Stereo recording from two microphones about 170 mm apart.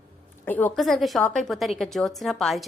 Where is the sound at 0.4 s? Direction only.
10° left (ahead or behind).